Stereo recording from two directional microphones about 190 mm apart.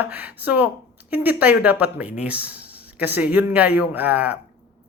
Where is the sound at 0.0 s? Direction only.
10° right (ahead or behind).